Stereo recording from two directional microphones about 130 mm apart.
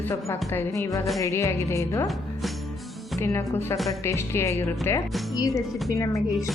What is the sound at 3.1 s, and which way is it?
Speech, 20° left (ahead or behind).